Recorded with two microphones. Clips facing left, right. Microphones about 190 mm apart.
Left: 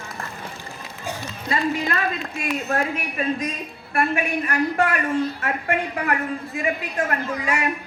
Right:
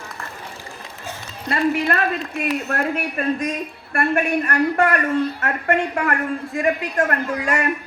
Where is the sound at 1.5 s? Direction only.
60° right (ahead or behind).